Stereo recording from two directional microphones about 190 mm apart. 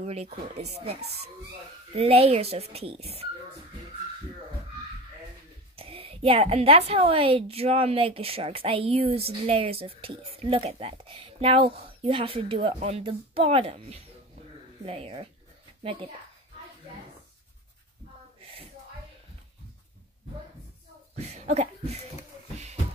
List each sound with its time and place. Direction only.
0.0 s speech: 35° right (ahead or behind)
5.8 s a woman's voice: 30° right (ahead or behind)
21.2 s a sound: 35° right (ahead or behind)